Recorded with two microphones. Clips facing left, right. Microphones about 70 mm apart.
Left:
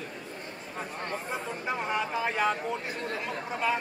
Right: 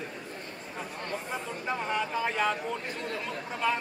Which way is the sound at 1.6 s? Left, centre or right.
Centre.